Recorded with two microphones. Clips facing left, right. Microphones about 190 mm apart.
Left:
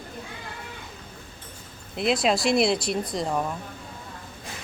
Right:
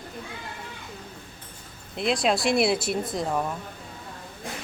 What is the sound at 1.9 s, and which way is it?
Speech, centre (ahead or behind).